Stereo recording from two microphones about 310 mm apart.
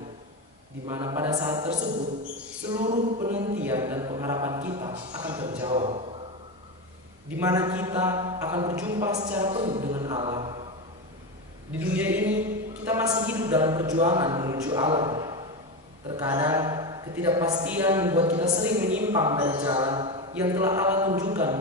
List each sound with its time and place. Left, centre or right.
0.8 s a woman's voice: centre
2.8 s a sound: right
3.5 s a woman's voice: centre
5.5 s a sound: centre
7.3 s a woman's voice: centre
9.9 s mantra: centre
11.7 s a man's voice: centre